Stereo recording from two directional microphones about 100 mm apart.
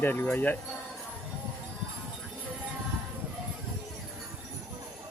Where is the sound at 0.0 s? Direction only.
20° left (ahead or behind).